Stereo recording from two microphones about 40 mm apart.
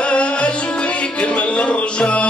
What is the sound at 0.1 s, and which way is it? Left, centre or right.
Music, left.